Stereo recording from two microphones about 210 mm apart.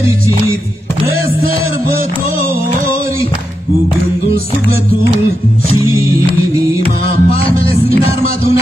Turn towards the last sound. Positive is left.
turn(degrees=25)  # may be behind; listen again after turning